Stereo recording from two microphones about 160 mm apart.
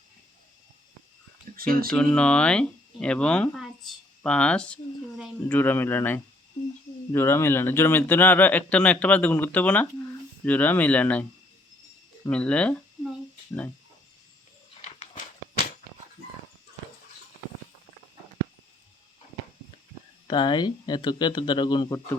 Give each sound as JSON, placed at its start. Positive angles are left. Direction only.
{"t": 1.5, "sound": "speech", "side_deg": -65}
{"t": 1.9, "sound": "speech", "side_deg": 5}
{"t": 12.3, "sound": "speech", "side_deg": 5}
{"t": 14.8, "sound": "a sound", "side_deg": 45}
{"t": 20.2, "sound": "speech", "side_deg": 30}